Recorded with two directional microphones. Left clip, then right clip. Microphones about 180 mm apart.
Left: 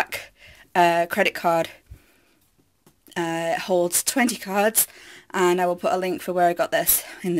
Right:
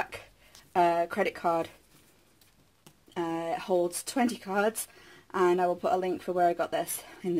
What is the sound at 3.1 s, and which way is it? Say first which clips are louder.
Speech: left 7 dB; 25° left (ahead or behind).